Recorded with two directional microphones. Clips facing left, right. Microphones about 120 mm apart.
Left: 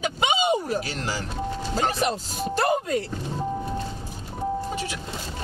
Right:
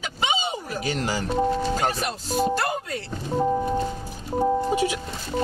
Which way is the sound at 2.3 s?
50° right (ahead or behind).